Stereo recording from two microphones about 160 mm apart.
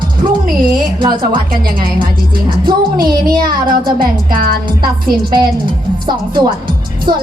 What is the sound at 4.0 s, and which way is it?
Speech, 65° right (ahead or behind).